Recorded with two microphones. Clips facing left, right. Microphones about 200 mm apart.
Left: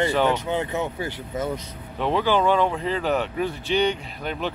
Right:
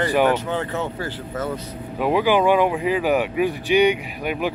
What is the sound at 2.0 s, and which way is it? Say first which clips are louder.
Speech: right 3 dB; 10° right (ahead or behind).